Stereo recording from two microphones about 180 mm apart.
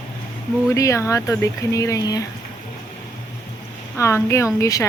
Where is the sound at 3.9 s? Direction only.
15° left (ahead or behind).